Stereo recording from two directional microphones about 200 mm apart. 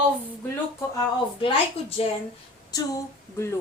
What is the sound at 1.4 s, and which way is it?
Speech, 30° left (ahead or behind).